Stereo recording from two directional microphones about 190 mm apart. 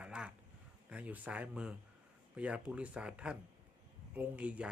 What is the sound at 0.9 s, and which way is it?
A man's voice, 5° right (ahead or behind).